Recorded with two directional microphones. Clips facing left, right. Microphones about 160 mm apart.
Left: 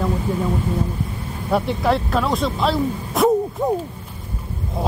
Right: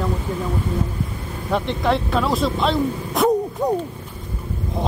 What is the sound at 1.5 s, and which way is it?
Speech, 5° left (ahead or behind).